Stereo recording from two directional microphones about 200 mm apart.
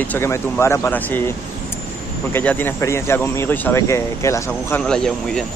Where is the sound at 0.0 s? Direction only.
10° left (ahead or behind).